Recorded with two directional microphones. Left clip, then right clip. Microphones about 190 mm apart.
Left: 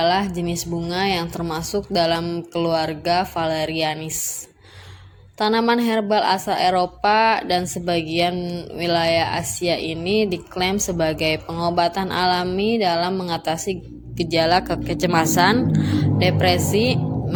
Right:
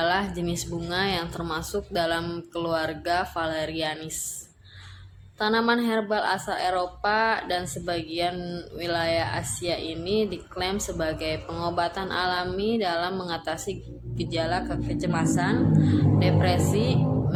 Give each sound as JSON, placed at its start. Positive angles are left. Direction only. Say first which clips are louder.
{"t": 0.0, "sound": "speech", "louder": "left 5 dB", "side_deg": 25}
{"t": 5.4, "sound": "a woman's voice", "louder": "left 5 dB", "side_deg": 30}